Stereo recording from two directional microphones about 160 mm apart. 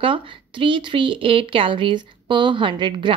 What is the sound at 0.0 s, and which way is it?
A woman's voice, 30° right (ahead or behind).